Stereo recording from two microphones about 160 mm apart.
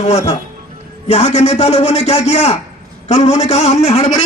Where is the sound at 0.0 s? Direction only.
45° left (ahead or behind).